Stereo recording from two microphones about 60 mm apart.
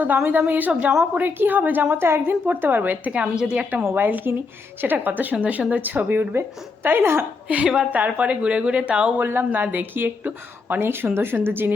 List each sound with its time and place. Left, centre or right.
0.3 s a woman's voice: right
3.9 s speech: right
7.4 s speech: right
9.1 s speech: right